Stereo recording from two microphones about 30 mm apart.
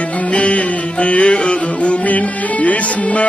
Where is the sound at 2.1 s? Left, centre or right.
Left.